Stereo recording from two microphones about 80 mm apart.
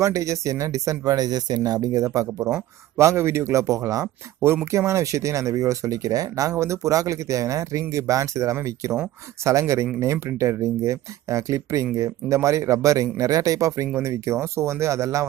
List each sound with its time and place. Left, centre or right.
0.0 s speech: right